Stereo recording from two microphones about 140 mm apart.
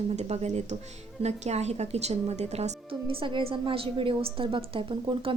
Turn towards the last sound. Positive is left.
turn(degrees=-35)  # may be behind; listen again after turning